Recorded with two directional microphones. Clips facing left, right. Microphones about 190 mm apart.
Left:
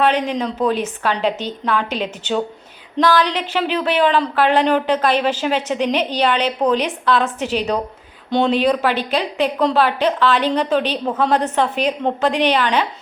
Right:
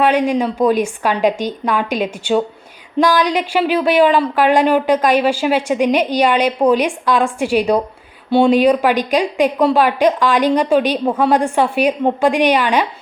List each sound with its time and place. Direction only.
0.0 s speech: 10° right (ahead or behind)